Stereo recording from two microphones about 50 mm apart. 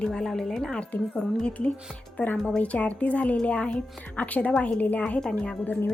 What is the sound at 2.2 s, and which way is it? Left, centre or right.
A woman's voice, left.